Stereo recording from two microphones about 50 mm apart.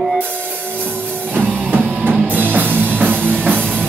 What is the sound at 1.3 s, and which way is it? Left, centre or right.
Music, right.